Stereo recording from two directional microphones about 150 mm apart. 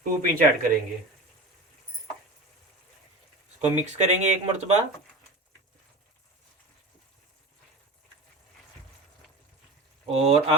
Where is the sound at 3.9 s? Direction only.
50° right (ahead or behind).